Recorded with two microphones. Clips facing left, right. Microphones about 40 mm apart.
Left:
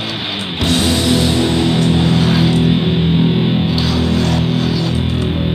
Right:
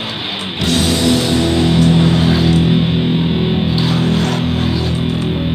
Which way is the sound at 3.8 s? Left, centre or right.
Right.